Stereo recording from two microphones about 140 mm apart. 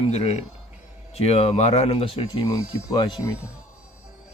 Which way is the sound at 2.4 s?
25° left (ahead or behind).